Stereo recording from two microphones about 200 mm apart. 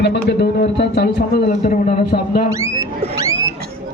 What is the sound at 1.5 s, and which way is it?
Speech, 35° left (ahead or behind).